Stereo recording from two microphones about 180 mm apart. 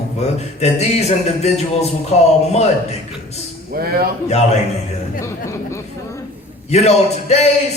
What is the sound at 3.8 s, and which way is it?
Speech, 55° right (ahead or behind).